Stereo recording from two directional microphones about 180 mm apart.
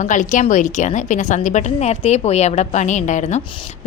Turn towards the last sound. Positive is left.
turn(degrees=40)  # may be behind; listen again after turning